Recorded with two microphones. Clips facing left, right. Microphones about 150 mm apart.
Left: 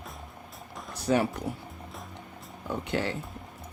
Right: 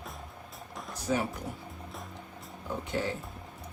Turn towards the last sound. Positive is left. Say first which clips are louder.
# left 2 dB
turn(degrees=75)  # may be behind; listen again after turning